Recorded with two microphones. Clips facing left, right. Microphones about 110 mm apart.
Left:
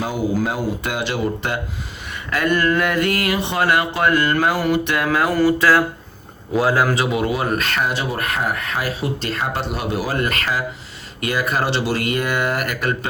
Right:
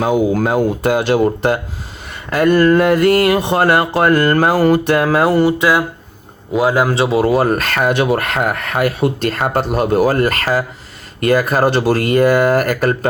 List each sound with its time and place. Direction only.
0.0 s speech: 55° right (ahead or behind); by 3.3 s 35° right (ahead or behind)
3.3 s speech: 45° right (ahead or behind)